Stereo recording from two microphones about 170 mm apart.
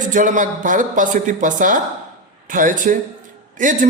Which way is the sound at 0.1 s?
50° right (ahead or behind).